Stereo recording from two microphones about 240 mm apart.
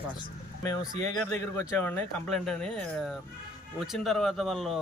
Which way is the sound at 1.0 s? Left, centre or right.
Right.